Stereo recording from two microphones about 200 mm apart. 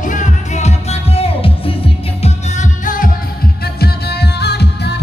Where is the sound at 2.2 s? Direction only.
40° left (ahead or behind).